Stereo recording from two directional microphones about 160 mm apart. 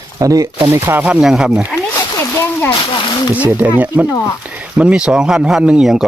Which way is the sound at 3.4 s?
10° right (ahead or behind).